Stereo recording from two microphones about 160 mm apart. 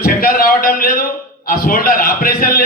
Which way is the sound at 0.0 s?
65° left (ahead or behind).